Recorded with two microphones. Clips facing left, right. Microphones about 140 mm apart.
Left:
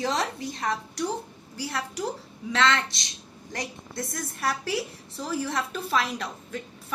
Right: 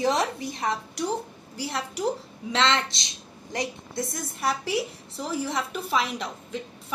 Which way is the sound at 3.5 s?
15° right (ahead or behind).